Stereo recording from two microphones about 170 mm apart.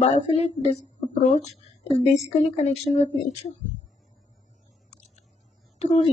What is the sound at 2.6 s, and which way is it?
Speech, 40° left (ahead or behind).